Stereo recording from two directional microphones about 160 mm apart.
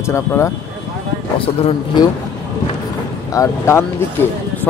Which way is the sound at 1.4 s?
35° left (ahead or behind).